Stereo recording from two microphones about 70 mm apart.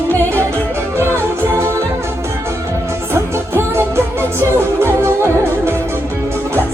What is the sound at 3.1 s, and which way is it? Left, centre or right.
Music, right.